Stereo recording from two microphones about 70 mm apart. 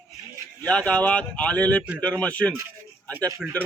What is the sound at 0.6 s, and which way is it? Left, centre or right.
A man's voice, centre.